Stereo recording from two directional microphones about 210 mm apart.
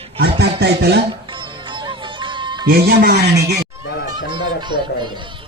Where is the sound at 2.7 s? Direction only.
45° right (ahead or behind).